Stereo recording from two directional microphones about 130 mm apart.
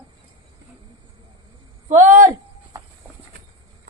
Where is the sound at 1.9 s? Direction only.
80° right.